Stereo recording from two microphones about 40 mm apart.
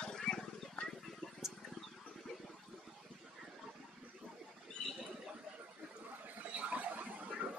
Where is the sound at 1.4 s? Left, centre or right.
Centre.